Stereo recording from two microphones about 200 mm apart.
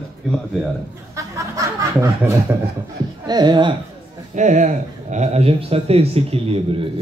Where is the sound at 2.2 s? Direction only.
10° right (ahead or behind).